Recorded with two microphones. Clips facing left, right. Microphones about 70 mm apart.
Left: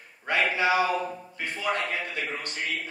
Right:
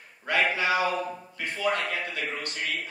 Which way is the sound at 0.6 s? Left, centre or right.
Left.